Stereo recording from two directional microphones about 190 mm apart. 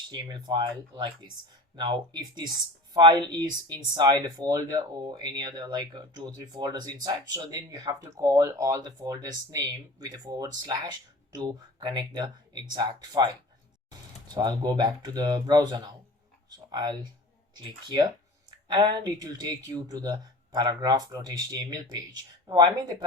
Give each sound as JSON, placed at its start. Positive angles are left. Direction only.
{"t": 0.1, "sound": "speech", "side_deg": -20}
{"t": 14.3, "sound": "speech", "side_deg": -20}